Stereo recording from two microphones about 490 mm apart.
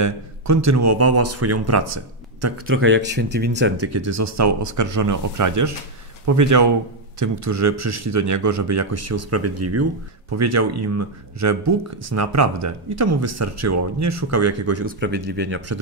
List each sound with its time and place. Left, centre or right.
0.0 s speech: right